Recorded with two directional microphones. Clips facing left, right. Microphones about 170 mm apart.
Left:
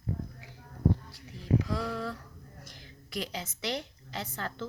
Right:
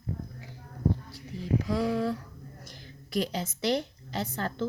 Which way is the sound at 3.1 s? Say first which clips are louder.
Right 7 dB; 35° right (ahead or behind).